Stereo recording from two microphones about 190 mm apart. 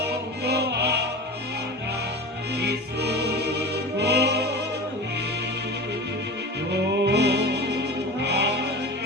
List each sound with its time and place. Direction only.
0.4 s music: 60° right (ahead or behind)
2.6 s music: 60° right (ahead or behind)
6.7 s music: 60° right (ahead or behind)